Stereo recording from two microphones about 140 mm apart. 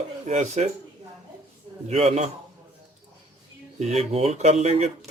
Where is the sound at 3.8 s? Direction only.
50° right (ahead or behind).